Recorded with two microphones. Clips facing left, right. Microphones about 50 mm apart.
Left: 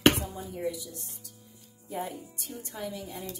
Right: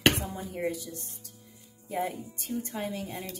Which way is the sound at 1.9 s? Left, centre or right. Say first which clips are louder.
Right 3 dB; right.